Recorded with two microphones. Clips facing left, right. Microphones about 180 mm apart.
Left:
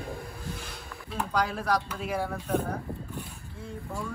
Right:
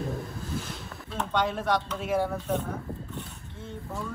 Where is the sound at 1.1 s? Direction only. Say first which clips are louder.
Right 1 dB; centre (ahead or behind).